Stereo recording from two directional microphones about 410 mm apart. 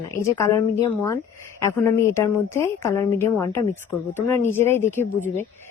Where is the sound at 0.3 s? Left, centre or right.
Centre.